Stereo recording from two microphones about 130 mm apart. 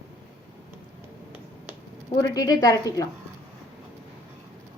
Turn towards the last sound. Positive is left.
turn(degrees=30)  # may be behind; listen again after turning